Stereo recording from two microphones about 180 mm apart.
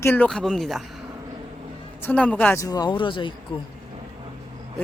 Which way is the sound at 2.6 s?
20° left (ahead or behind).